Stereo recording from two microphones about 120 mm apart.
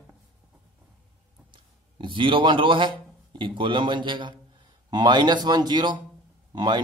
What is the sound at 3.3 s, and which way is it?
A man's voice, 40° right (ahead or behind).